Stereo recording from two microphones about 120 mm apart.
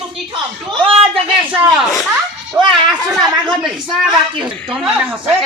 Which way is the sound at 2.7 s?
Centre (ahead or behind).